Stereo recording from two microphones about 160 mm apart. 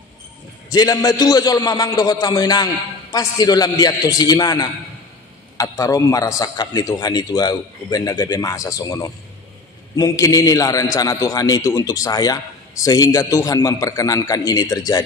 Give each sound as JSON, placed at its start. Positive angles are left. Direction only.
{"t": 0.7, "sound": "a man's voice", "side_deg": 25}